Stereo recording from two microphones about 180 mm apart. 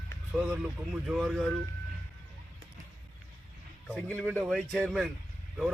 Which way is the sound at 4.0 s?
10° left (ahead or behind).